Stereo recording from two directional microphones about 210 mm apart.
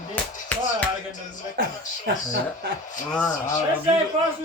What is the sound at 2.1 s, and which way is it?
Speech, 50° right (ahead or behind).